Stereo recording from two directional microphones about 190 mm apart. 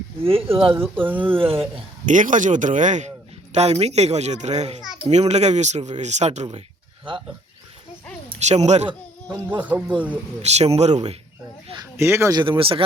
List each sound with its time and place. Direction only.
0.2 s speech: 30° right (ahead or behind)
0.7 s speech: 10° right (ahead or behind)
1.4 s speech: 30° right (ahead or behind)
2.0 s speech: 40° right (ahead or behind)
8.3 s a woman's voice: 35° right (ahead or behind)
9.6 s speech: 10° right (ahead or behind)
10.4 s speech: 35° right (ahead or behind)
11.8 s speech: 15° right (ahead or behind)